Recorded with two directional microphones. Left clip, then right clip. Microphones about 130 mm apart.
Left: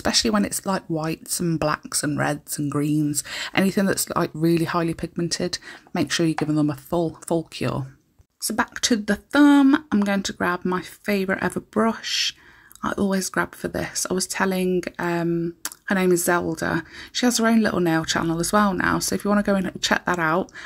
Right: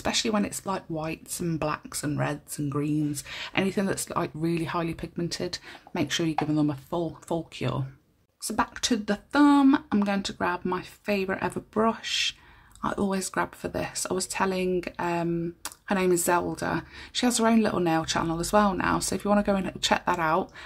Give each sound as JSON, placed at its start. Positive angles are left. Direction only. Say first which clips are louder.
{"t": 0.0, "sound": "speech", "louder": "left 5 dB", "side_deg": 45}